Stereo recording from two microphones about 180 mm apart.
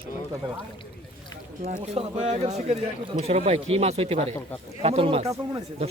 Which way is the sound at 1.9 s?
35° right (ahead or behind).